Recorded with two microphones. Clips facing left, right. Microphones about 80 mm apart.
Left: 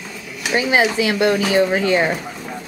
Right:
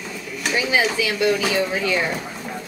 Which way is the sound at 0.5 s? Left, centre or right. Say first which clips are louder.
Left 4 dB; left.